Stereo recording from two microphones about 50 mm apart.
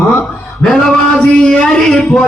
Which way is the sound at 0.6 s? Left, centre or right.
Centre.